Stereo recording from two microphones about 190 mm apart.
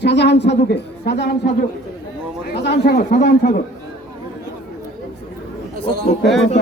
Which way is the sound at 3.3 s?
55° left (ahead or behind).